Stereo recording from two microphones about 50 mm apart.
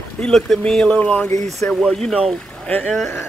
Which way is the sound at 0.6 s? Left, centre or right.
Centre.